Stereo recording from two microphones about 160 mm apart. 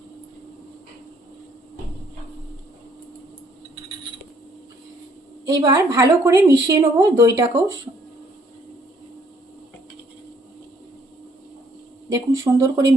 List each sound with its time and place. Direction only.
5.5 s a woman's voice: 20° right (ahead or behind)
12.0 s a woman's voice: 20° right (ahead or behind)